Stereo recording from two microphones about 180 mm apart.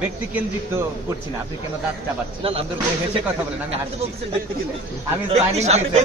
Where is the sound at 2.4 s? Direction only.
30° right (ahead or behind).